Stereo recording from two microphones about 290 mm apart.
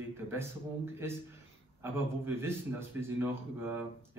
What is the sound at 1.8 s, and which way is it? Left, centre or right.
A man's voice, centre.